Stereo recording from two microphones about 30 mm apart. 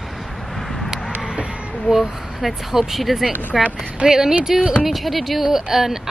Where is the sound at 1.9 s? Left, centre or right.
Centre.